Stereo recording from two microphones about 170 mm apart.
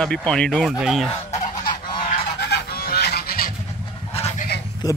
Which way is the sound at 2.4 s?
70° left (ahead or behind).